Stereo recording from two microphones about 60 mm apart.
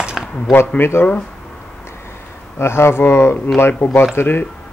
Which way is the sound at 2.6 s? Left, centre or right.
Left.